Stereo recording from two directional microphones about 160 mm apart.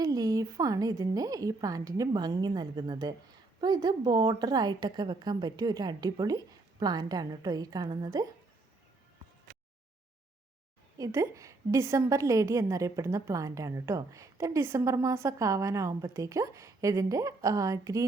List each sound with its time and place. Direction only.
0.0 s a woman's voice: 25° right (ahead or behind)
10.9 s a woman's voice: 20° right (ahead or behind)